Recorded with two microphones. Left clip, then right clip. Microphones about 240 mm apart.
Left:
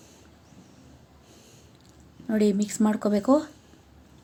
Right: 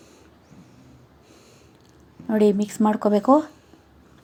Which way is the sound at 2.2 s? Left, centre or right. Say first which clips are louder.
Right 5 dB; centre.